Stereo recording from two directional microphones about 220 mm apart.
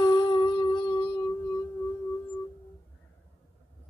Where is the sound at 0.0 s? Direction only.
20° left (ahead or behind).